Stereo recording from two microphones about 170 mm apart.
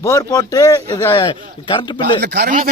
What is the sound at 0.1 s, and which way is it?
Speech, 20° left (ahead or behind).